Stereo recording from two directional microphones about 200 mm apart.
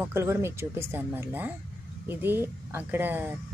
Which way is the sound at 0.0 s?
15° right (ahead or behind).